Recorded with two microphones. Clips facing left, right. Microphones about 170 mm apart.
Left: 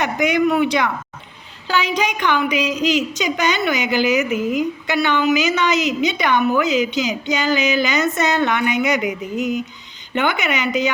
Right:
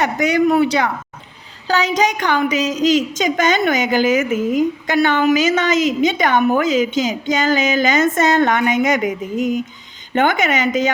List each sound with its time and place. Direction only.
0.0 s a woman's voice: 40° right (ahead or behind)